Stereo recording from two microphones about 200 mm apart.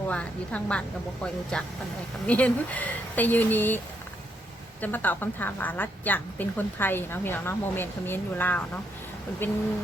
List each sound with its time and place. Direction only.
0.1 s a woman's voice: 5° left (ahead or behind)
4.8 s a woman's voice: 10° left (ahead or behind)